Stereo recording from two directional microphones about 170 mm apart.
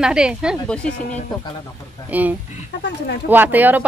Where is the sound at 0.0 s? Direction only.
5° right (ahead or behind).